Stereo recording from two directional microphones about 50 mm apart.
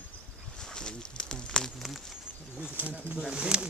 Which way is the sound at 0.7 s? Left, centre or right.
Centre.